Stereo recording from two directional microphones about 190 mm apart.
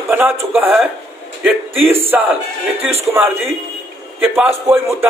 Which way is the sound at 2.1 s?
5° right (ahead or behind).